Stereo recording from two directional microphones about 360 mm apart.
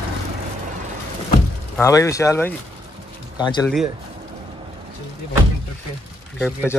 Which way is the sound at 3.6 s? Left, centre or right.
Centre.